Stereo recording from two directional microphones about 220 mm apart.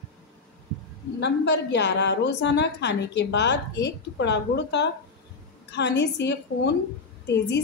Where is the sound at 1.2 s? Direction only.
50° left (ahead or behind).